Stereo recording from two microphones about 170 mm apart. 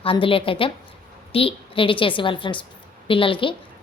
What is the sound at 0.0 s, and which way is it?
A woman's voice, 30° left (ahead or behind).